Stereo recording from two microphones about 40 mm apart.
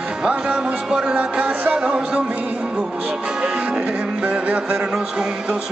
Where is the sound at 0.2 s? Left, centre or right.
Right.